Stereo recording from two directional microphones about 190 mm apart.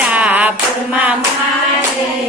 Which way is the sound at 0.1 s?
10° right (ahead or behind).